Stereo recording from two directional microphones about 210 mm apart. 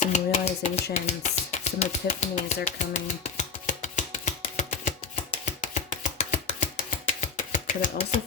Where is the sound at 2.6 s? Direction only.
35° left (ahead or behind).